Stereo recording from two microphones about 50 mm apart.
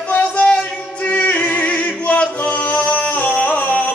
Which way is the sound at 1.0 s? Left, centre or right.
Left.